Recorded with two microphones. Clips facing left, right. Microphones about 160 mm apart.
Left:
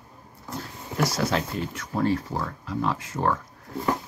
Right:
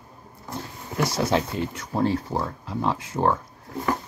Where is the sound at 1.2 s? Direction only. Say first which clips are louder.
Right 3 dB; 30° right (ahead or behind).